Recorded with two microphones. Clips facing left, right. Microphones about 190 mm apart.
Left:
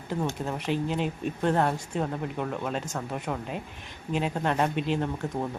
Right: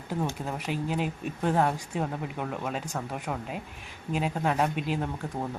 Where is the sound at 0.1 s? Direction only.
5° right (ahead or behind).